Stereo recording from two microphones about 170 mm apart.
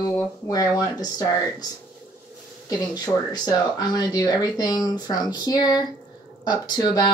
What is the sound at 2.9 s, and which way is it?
Speech, 20° left (ahead or behind).